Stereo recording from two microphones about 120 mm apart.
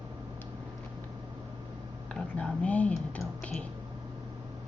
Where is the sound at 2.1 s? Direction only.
5° left (ahead or behind).